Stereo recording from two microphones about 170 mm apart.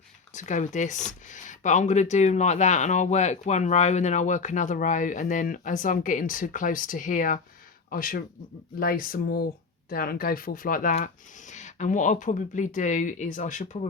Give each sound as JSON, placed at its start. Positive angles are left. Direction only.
{"t": 0.3, "sound": "speech", "side_deg": 45}